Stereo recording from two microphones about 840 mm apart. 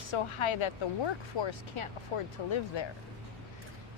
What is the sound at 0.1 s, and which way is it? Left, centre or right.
Speech, left.